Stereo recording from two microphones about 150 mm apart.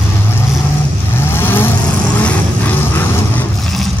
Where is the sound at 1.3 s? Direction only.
15° left (ahead or behind).